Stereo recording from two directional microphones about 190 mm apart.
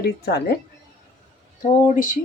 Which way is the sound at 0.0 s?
55° left (ahead or behind).